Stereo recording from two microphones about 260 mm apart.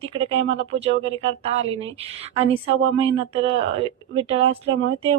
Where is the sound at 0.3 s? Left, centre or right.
Right.